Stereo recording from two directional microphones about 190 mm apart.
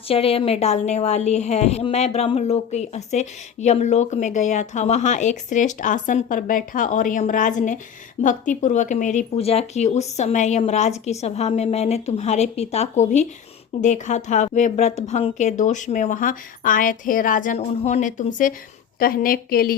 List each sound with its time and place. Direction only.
0.1 s a woman's voice: 30° left (ahead or behind); by 19.7 s 50° left (ahead or behind)